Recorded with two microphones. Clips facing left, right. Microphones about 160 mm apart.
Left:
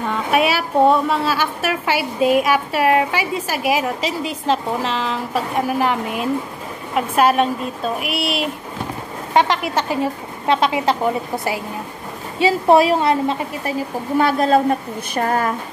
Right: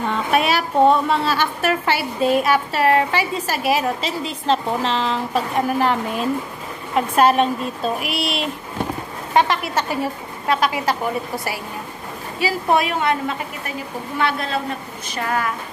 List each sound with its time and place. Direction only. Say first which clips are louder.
0.3 s a woman's voice: left 2 dB; 10° left (ahead or behind)
9.3 s a woman's voice: left 1 dB; 15° left (ahead or behind)
12.4 s a woman's voice: left 6 dB; 30° left (ahead or behind)